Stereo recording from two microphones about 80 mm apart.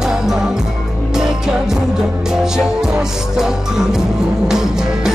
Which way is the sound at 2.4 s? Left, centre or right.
Centre.